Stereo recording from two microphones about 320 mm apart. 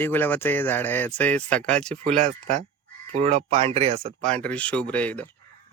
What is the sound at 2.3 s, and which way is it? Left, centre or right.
Speech, centre.